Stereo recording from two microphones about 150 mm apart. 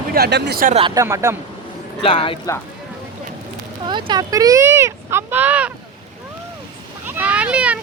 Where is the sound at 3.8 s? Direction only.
30° right (ahead or behind); by 5.7 s 10° right (ahead or behind).